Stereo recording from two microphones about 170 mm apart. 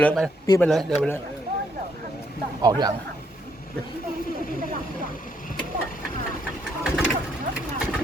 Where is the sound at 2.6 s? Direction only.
25° right (ahead or behind).